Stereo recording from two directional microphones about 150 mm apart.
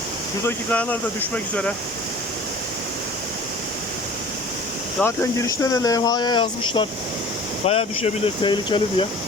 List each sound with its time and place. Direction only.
0.4 s speech: 10° left (ahead or behind)
5.0 s speech: 20° left (ahead or behind)